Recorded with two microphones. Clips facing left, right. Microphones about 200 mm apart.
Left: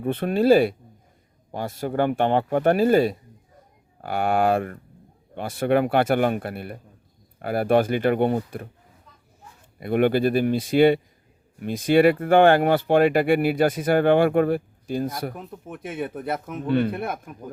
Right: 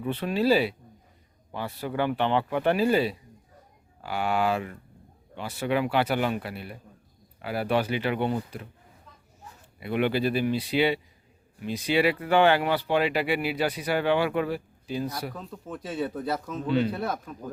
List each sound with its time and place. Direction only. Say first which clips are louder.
0.0 s speech: left 5 dB; 50° left (ahead or behind)
9.8 s speech: left 6 dB; 50° left (ahead or behind)
15.4 s speech: left 1 dB; 20° left (ahead or behind)
16.6 s speech: left 3 dB; 55° left (ahead or behind)
17.1 s speech: even; 20° left (ahead or behind)